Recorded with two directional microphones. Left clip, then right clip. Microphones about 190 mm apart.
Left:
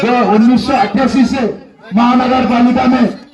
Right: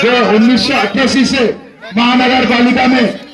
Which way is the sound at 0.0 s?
45° left (ahead or behind).